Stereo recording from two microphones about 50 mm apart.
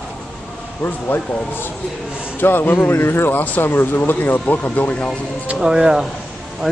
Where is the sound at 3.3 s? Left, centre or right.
Left.